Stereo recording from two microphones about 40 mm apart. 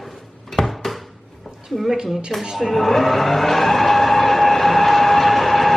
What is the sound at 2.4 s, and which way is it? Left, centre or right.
Speech, centre.